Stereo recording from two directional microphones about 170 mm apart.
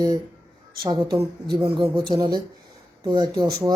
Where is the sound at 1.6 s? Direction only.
35° right (ahead or behind).